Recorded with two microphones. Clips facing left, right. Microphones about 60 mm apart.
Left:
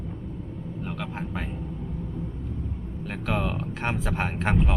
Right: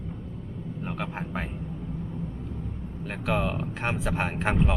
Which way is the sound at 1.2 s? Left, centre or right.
Centre.